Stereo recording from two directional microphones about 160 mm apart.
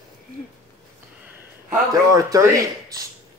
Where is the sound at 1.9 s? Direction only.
20° right (ahead or behind).